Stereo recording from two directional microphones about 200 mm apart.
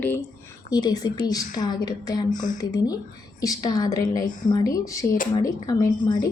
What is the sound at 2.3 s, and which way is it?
Speech, 40° left (ahead or behind).